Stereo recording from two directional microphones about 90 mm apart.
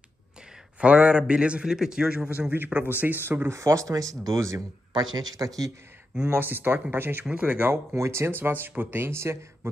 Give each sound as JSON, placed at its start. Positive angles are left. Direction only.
{"t": 0.7, "sound": "a man's voice", "side_deg": -10}
{"t": 2.5, "sound": "speech", "side_deg": -20}
{"t": 4.9, "sound": "speech", "side_deg": -50}
{"t": 6.1, "sound": "speech", "side_deg": -15}
{"t": 7.2, "sound": "a man's voice", "side_deg": -15}
{"t": 7.9, "sound": "speech", "side_deg": -30}